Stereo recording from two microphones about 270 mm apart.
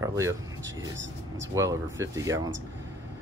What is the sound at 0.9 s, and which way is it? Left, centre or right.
Speech, right.